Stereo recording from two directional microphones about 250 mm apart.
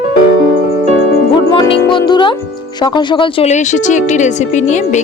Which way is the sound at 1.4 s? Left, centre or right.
Centre.